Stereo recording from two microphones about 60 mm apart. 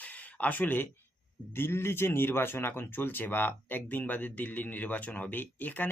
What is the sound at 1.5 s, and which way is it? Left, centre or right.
Speech, left.